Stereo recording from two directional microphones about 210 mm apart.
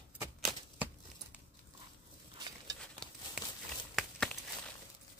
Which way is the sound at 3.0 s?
5° left (ahead or behind).